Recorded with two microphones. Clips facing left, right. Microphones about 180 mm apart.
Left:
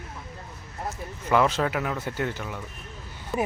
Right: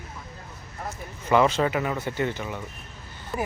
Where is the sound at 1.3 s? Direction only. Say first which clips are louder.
Right 2 dB; centre (ahead or behind).